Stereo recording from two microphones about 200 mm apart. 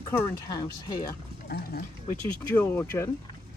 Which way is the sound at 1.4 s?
50° left (ahead or behind).